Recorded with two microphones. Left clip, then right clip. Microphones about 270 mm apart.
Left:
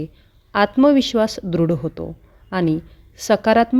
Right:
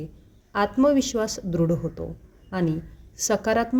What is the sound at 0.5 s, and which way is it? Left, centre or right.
A woman's voice, left.